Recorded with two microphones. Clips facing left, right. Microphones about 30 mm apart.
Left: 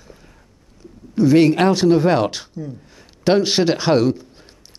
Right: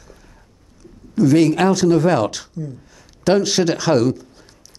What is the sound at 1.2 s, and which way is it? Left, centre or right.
Speech, left.